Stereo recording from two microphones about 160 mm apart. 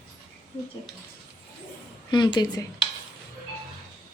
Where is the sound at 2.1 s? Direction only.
30° left (ahead or behind).